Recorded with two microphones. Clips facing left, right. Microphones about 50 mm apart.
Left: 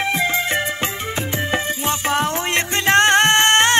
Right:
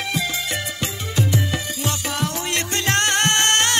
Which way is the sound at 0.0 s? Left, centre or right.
Left.